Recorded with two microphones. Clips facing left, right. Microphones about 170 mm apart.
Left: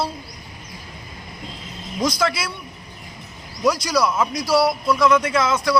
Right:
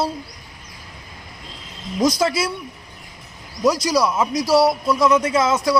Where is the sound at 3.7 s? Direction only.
40° right (ahead or behind).